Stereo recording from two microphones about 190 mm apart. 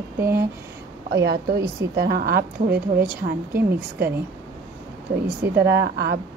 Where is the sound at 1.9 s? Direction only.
55° right (ahead or behind).